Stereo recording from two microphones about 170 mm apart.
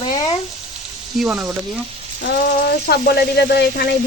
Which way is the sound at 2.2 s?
70° left (ahead or behind).